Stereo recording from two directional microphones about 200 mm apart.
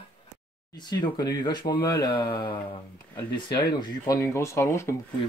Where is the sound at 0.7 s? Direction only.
20° left (ahead or behind).